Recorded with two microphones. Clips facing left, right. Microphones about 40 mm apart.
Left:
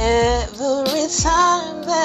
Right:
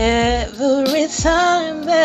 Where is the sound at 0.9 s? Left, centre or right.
Right.